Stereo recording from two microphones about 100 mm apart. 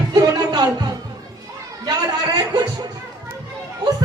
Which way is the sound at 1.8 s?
45° right (ahead or behind).